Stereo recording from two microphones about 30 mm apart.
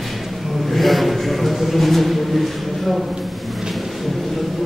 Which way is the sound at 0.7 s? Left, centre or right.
Centre.